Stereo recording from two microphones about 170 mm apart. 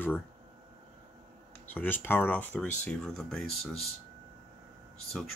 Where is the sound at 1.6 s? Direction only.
10° left (ahead or behind).